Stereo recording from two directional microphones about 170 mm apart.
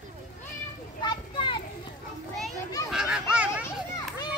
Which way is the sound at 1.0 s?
30° left (ahead or behind).